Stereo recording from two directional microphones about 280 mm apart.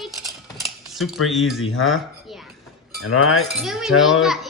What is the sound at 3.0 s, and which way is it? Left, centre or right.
Speech, left.